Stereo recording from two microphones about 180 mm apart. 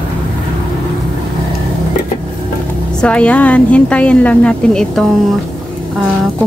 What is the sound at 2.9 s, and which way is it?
A woman's voice, 5° left (ahead or behind).